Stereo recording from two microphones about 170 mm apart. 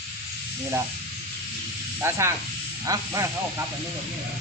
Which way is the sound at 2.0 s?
15° right (ahead or behind).